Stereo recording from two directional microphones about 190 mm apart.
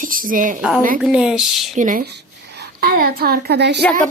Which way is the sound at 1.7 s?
45° right (ahead or behind).